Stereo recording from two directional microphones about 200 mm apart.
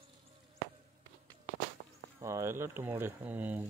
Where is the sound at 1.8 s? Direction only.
40° right (ahead or behind).